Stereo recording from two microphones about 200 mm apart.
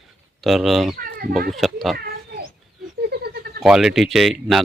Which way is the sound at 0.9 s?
45° right (ahead or behind).